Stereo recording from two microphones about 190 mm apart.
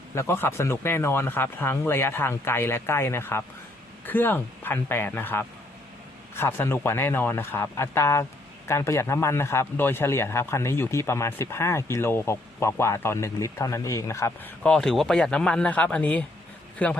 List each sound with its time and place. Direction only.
0.1 s a man's voice: 15° left (ahead or behind)